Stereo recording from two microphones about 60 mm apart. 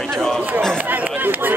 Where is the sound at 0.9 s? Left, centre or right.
Right.